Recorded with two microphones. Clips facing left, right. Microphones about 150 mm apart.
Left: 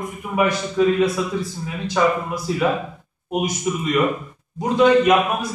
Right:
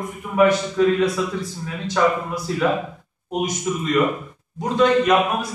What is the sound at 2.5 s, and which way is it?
A man's voice, 10° left (ahead or behind).